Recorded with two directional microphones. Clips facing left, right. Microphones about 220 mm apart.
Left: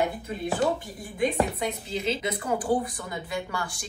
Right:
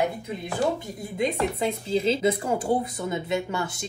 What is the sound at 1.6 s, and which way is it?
Speech, 30° right (ahead or behind).